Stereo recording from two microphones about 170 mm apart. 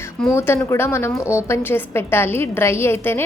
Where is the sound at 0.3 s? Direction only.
15° left (ahead or behind).